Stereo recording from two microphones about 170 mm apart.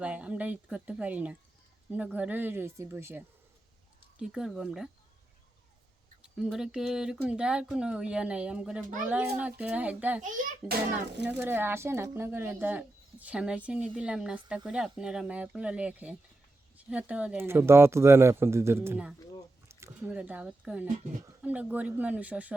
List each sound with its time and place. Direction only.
0.0 s speech: 5° right (ahead or behind)
4.2 s speech: 5° right (ahead or behind)
6.2 s speech: 5° right (ahead or behind)
10.2 s a child's voice: 50° right (ahead or behind)
11.3 s speech: 10° right (ahead or behind)